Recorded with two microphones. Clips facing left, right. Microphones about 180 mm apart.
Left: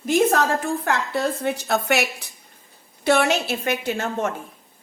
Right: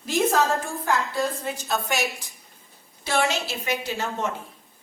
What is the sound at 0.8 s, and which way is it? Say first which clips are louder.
A woman's voice: right 2 dB; 65° left (ahead or behind).